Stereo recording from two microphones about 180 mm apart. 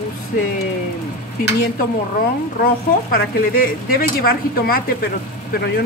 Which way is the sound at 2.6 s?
55° left (ahead or behind).